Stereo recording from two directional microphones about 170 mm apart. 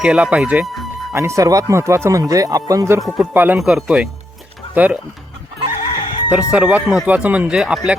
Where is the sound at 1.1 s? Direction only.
15° right (ahead or behind).